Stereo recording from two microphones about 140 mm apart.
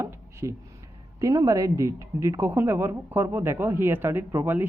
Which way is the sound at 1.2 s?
25° right (ahead or behind).